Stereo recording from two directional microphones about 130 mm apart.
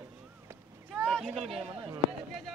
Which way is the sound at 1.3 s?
50° right (ahead or behind).